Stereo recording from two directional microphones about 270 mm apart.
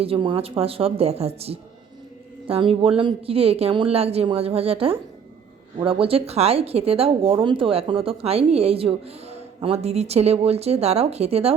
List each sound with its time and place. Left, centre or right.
0.0 s a woman's voice: centre